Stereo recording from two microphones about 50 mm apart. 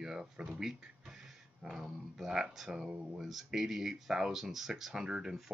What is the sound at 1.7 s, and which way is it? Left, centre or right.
Speech, centre.